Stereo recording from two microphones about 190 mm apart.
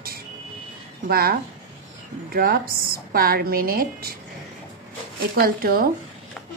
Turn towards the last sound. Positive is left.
turn(degrees=-50)  # may be behind; listen again after turning